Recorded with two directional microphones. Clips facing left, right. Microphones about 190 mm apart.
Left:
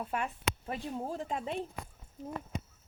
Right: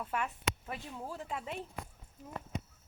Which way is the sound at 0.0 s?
25° left (ahead or behind).